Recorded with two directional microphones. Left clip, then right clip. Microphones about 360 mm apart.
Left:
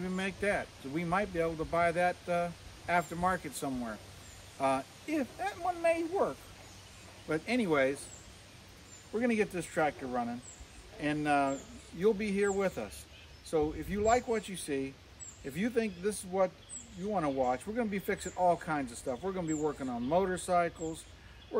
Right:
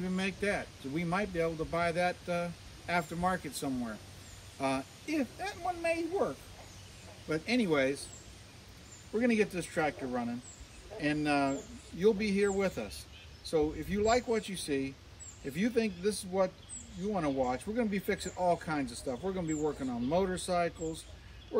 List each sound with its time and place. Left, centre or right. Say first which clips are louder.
0.0 s speech: even; centre
9.1 s speech: right 1 dB; centre